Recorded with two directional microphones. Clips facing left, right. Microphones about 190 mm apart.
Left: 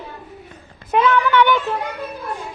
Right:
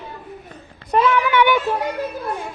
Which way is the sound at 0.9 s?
10° right (ahead or behind).